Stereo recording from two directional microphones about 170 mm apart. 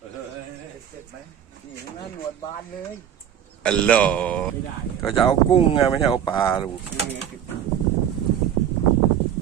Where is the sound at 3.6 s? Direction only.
5° left (ahead or behind).